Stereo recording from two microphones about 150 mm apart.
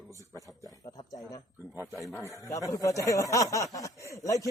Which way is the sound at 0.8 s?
25° left (ahead or behind).